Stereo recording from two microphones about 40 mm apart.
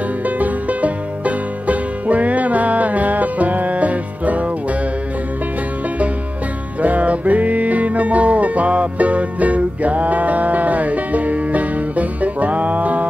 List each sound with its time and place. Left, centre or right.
0.2 s music: right
6.8 s music: right